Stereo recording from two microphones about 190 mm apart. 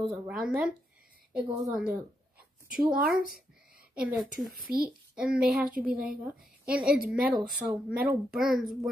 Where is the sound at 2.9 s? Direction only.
50° right (ahead or behind).